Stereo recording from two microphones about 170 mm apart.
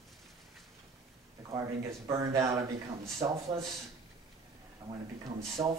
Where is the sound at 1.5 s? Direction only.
20° right (ahead or behind).